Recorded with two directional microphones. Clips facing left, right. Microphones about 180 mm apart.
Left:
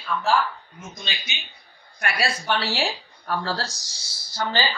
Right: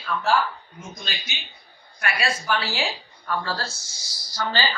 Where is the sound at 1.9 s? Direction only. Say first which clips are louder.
Left 1 dB; 35° left (ahead or behind).